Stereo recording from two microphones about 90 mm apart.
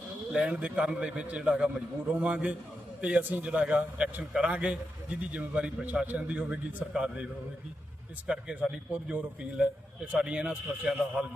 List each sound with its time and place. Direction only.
0.3 s a man's voice: 15° right (ahead or behind)
8.3 s a man's voice: 10° right (ahead or behind)